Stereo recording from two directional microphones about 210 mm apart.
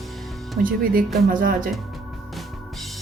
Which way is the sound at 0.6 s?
40° right (ahead or behind).